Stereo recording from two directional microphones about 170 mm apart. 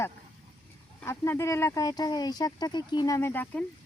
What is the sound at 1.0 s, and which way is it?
Speech, 15° left (ahead or behind).